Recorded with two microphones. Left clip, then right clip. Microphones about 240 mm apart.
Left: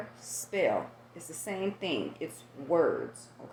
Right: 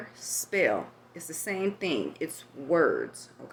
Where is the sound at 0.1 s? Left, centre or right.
Right.